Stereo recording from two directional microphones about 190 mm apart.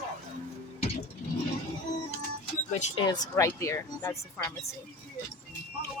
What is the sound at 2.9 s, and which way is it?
Speech, 20° left (ahead or behind).